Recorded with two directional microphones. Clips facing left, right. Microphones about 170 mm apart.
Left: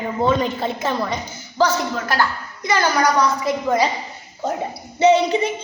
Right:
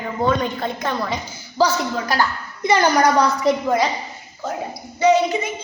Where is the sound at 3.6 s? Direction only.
Centre (ahead or behind).